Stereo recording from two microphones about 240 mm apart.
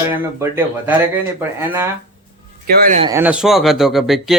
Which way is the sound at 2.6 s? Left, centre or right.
Right.